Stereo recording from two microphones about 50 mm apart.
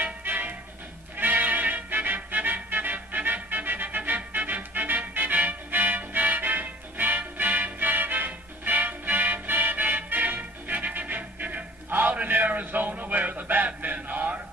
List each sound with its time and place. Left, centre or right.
0.0 s music: right
11.9 s a sound: right
13.7 s chant: right